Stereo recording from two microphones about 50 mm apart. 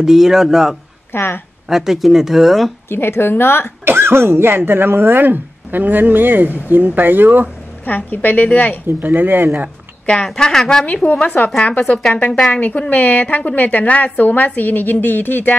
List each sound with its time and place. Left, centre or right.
0.0 s speech: centre
1.1 s a woman's voice: left
1.7 s speech: centre
2.9 s a woman's voice: left
3.8 s speech: right
7.8 s a woman's voice: left
8.8 s speech: right
10.2 s a woman's voice: centre
11.1 s a woman's voice: left